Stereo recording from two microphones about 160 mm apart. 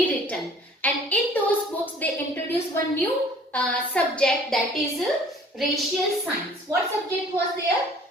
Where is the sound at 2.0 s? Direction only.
10° left (ahead or behind).